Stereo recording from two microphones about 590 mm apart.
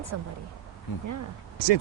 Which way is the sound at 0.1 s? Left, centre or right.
Right.